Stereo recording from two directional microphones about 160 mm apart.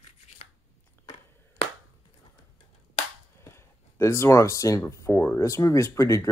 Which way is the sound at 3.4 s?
15° left (ahead or behind).